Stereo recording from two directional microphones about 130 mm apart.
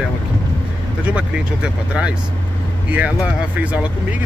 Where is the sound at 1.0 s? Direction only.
10° right (ahead or behind).